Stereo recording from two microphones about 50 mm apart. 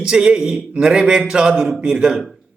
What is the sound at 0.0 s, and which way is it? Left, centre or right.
A man's voice, centre.